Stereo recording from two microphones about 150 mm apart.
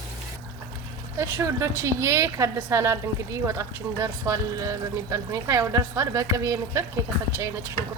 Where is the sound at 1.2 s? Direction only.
20° right (ahead or behind).